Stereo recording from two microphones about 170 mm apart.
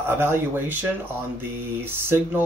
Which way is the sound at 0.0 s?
15° right (ahead or behind).